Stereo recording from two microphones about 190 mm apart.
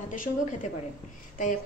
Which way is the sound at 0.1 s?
45° left (ahead or behind).